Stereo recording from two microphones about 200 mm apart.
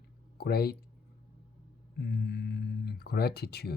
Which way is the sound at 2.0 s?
55° left (ahead or behind).